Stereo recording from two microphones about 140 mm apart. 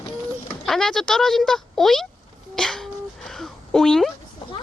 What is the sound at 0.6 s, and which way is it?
Speech, 5° left (ahead or behind).